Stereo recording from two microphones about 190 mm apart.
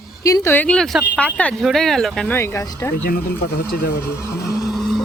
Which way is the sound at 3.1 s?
50° left (ahead or behind).